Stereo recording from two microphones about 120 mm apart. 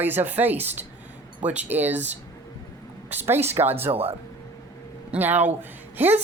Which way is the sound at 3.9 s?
55° right (ahead or behind).